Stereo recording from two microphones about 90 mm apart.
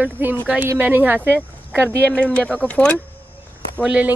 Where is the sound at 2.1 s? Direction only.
10° left (ahead or behind).